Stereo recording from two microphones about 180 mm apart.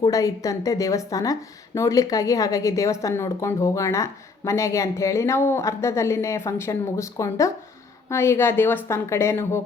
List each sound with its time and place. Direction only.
0.0 s a woman's voice: 20° left (ahead or behind)